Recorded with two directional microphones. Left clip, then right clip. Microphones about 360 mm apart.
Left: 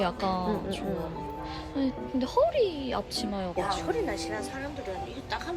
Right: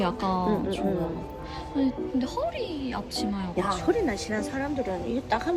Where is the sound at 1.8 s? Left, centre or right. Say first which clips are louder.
Right 3 dB; centre.